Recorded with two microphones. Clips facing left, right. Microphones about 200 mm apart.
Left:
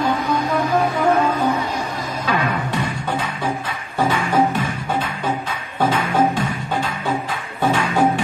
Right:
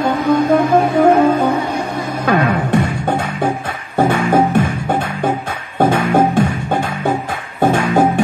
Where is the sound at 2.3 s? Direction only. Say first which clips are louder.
Right 7 dB; 55° right (ahead or behind).